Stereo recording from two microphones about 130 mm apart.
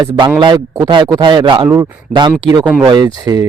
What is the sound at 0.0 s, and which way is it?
Speech, 35° right (ahead or behind).